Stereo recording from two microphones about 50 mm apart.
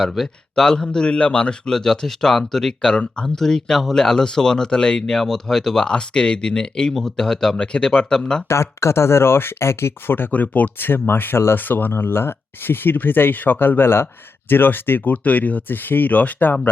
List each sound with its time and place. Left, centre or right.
0.0 s a man's voice: centre
0.5 s speech: centre
3.2 s speech: centre
7.5 s speech: centre
8.4 s speech: left
10.1 s speech: left
11.5 s speech: left
15.1 s speech: left